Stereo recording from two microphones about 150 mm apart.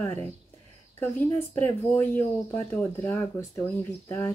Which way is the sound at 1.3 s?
10° left (ahead or behind).